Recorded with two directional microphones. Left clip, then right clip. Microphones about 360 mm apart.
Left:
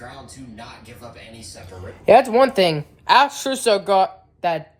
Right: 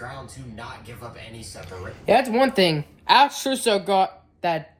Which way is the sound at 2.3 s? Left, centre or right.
Centre.